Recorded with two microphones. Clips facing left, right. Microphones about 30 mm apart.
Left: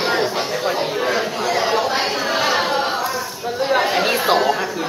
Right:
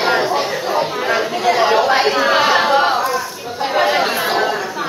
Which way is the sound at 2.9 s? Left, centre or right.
Centre.